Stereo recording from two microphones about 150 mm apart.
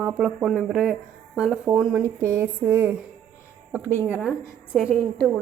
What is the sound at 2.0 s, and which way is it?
Speech, 20° right (ahead or behind).